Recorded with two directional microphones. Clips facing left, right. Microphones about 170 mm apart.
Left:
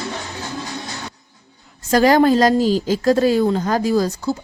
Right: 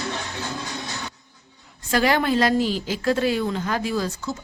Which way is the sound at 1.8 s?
40° left (ahead or behind).